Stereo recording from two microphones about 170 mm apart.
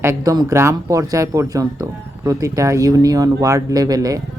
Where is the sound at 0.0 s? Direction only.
20° right (ahead or behind).